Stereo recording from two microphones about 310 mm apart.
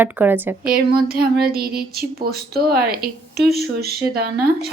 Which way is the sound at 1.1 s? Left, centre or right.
Right.